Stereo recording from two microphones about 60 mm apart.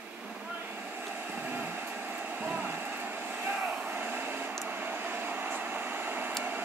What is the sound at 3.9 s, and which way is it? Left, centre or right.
Hair dryer, right.